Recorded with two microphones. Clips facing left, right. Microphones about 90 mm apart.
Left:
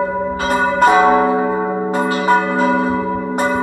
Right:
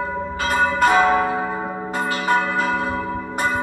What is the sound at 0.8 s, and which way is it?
Church bell, 20° left (ahead or behind).